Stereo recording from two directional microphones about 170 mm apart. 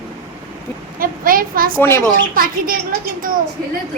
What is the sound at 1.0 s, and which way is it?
Speech, 55° right (ahead or behind).